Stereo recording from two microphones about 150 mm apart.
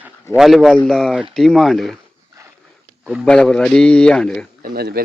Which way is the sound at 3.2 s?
5° left (ahead or behind).